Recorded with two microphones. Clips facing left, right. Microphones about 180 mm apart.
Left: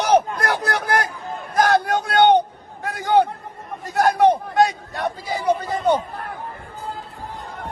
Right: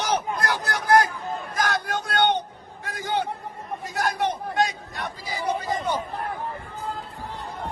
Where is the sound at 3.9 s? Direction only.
60° left (ahead or behind).